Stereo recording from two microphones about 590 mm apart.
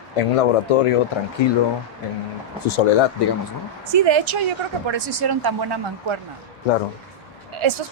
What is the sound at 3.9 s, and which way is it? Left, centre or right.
Speech, right.